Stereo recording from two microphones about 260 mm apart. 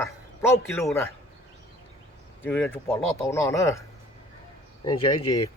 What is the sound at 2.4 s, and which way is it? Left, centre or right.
A man's voice, centre.